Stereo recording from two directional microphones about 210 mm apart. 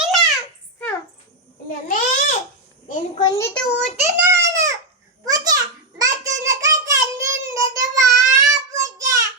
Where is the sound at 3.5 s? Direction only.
5° left (ahead or behind).